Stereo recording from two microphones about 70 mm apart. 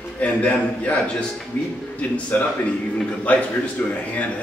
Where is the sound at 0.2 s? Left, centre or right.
Centre.